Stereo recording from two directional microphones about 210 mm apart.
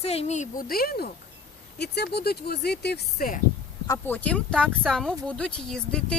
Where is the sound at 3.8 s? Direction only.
10° left (ahead or behind).